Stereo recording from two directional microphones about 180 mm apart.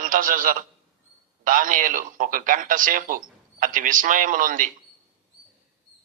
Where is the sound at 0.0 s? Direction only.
50° right (ahead or behind).